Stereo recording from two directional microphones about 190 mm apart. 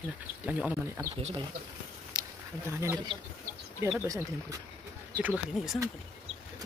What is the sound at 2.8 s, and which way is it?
Speech, 20° right (ahead or behind).